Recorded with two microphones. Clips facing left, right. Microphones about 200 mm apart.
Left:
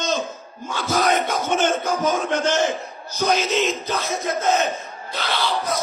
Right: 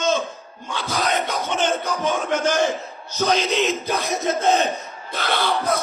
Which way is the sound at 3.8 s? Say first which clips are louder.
Right 1 dB; 10° right (ahead or behind).